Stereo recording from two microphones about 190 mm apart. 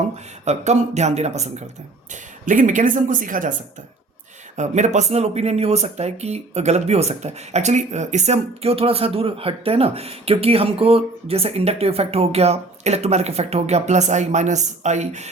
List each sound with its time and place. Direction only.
0.4 s speech: 35° right (ahead or behind)
4.5 s speech: 40° right (ahead or behind)